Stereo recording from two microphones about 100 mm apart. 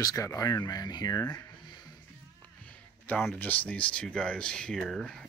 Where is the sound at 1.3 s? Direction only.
40° left (ahead or behind).